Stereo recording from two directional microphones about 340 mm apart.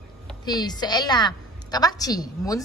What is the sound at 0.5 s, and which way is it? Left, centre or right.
A woman's voice, centre.